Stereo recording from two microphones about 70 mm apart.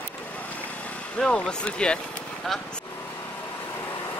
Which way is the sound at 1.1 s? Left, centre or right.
Centre.